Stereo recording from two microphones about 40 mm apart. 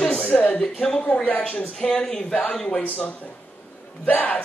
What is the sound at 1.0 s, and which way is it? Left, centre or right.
Speech, left.